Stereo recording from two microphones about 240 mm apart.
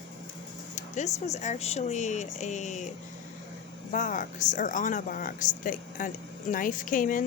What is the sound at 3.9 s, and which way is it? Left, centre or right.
Speech, left.